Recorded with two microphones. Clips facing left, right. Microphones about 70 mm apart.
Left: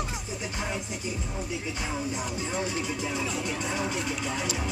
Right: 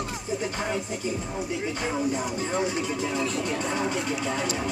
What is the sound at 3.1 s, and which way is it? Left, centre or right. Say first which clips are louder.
Speech: right 4 dB; centre.